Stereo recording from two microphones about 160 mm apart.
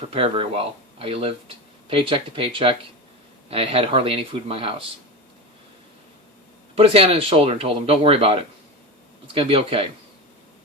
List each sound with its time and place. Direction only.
0.0 s speech: 35° right (ahead or behind)
6.7 s speech: 35° right (ahead or behind)